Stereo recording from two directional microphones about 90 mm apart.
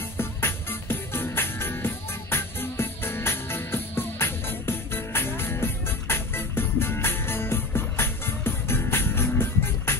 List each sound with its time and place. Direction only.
0.2 s music: 25° left (ahead or behind)